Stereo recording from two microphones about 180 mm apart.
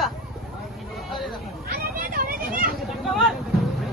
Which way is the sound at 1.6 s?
55° right (ahead or behind).